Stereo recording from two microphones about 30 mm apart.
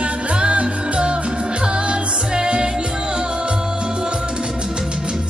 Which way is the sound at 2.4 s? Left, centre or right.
Right.